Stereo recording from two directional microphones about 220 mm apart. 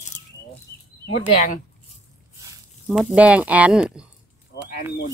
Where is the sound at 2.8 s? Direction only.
5° right (ahead or behind).